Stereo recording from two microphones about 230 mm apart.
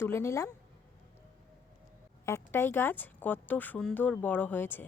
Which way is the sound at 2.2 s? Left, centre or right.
Centre.